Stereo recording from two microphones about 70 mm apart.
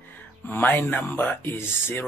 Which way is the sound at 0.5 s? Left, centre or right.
Left.